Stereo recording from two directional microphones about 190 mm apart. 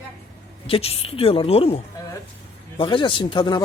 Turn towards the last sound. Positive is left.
turn(degrees=25)  # may be behind; listen again after turning